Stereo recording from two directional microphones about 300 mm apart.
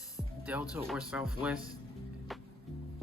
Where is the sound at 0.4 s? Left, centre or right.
Centre.